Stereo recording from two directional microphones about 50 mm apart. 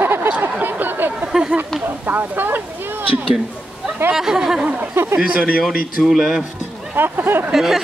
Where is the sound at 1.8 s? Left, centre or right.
Right.